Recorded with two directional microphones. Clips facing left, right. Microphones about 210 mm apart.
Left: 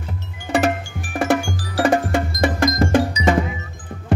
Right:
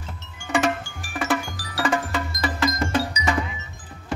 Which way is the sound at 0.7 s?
45° left (ahead or behind).